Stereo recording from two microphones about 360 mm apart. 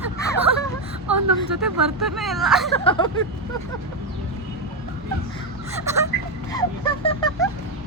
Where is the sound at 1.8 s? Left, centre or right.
Centre.